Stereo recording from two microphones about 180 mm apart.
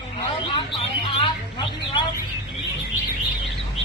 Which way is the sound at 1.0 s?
25° left (ahead or behind).